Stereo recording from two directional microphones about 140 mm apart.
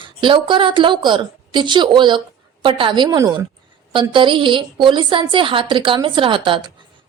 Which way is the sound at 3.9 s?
35° right (ahead or behind).